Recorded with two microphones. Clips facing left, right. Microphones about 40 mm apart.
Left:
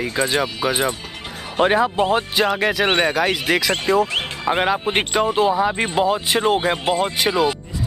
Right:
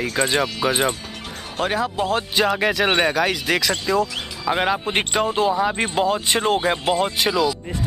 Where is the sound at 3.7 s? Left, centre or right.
Left.